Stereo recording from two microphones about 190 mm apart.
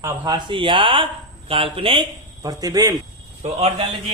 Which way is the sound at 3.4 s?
30° right (ahead or behind).